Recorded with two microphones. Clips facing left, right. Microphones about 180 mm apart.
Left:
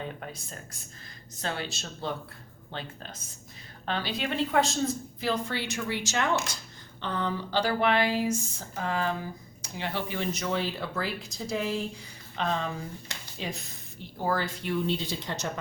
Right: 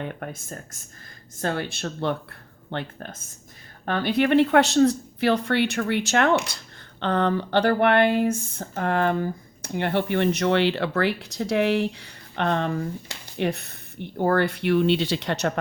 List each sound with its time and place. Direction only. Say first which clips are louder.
0.0 s speech: right 5 dB; 60° right (ahead or behind)